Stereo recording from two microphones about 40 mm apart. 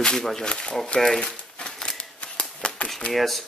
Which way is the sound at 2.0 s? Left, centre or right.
Left.